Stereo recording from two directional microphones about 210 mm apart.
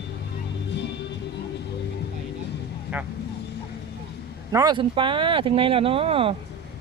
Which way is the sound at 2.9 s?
10° right (ahead or behind).